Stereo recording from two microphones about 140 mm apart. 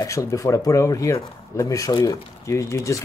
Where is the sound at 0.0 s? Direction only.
25° left (ahead or behind).